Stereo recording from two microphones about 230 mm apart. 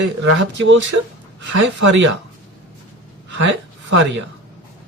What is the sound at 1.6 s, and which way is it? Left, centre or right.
Speech, right.